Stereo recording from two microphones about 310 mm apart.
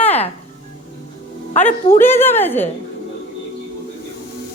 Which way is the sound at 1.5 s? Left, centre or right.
Left.